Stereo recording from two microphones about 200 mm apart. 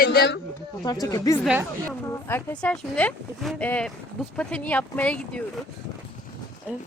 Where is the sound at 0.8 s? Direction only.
20° left (ahead or behind).